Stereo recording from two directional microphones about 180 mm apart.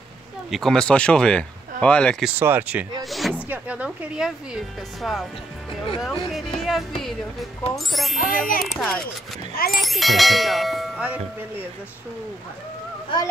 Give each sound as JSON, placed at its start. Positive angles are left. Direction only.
{"t": 0.5, "sound": "ding", "side_deg": 0}
{"t": 2.2, "sound": "speech", "side_deg": -10}
{"t": 5.9, "sound": "ding", "side_deg": 0}
{"t": 8.2, "sound": "a child's voice", "side_deg": 50}
{"t": 8.7, "sound": "ding", "side_deg": 5}